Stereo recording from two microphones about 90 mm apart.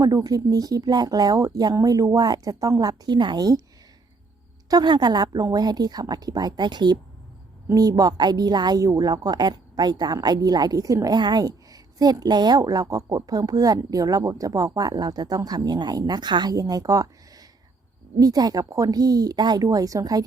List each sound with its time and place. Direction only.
0.0 s a woman's voice: 40° right (ahead or behind)
4.7 s a woman's voice: 50° right (ahead or behind)
7.7 s a woman's voice: 45° right (ahead or behind)